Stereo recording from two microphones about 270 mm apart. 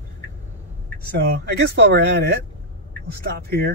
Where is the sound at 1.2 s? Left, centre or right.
Right.